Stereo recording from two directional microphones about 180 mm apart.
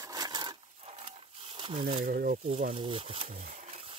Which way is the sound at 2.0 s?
50° right (ahead or behind).